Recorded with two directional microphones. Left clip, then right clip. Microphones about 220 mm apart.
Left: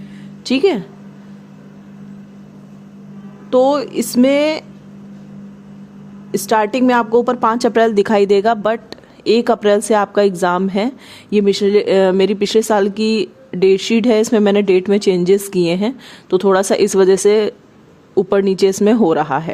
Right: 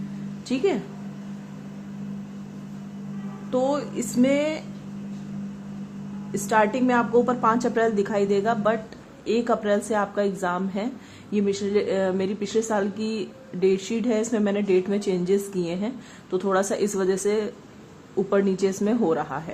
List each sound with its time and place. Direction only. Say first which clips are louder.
0.4 s a woman's voice: left 10 dB; 45° left (ahead or behind)
3.5 s a woman's voice: left 11 dB; 45° left (ahead or behind)
6.3 s a woman's voice: left 6 dB; 50° left (ahead or behind)